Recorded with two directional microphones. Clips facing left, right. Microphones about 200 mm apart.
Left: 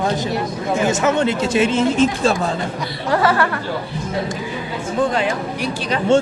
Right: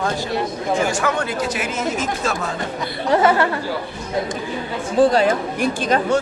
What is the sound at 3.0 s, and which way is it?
Speech, 20° right (ahead or behind).